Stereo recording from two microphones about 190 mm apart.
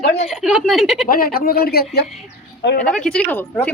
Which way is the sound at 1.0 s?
50° left (ahead or behind).